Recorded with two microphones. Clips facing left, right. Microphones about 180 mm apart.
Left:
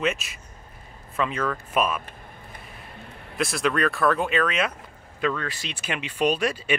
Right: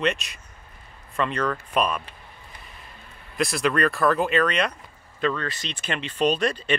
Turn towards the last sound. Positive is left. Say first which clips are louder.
# right 1 dB
turn(degrees=10)  # may be behind; listen again after turning